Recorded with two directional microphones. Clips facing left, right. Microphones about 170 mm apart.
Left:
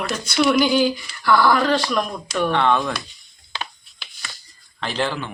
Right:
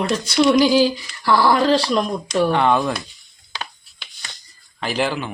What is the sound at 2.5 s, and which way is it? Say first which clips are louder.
Speech: even; 10° right (ahead or behind).